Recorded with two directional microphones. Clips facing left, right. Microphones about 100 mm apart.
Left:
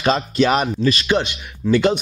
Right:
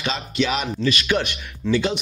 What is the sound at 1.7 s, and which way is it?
Speech, 50° left (ahead or behind).